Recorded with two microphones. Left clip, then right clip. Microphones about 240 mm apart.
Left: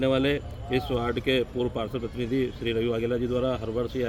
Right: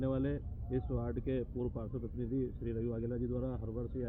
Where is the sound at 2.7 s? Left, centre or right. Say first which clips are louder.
Left 13 dB; centre.